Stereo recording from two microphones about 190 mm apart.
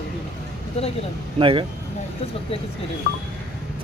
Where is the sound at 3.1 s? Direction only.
55° left (ahead or behind).